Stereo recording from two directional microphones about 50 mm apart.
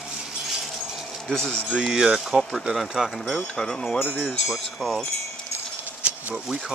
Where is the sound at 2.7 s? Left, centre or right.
Centre.